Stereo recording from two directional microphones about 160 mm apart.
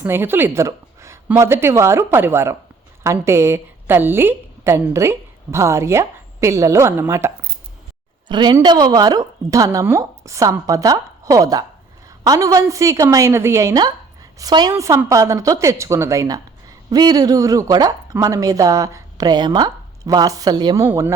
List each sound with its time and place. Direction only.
0.0 s a woman's voice: 15° right (ahead or behind)
8.3 s a woman's voice: 25° right (ahead or behind)